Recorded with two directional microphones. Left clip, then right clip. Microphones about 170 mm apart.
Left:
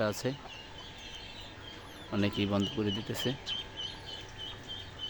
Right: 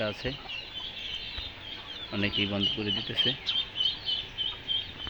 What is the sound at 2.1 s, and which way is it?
Speech, 25° left (ahead or behind).